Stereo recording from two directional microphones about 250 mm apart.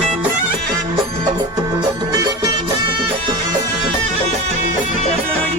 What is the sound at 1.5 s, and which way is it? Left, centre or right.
Music, centre.